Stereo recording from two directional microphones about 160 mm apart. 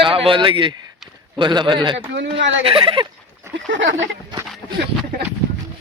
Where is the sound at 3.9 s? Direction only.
20° right (ahead or behind).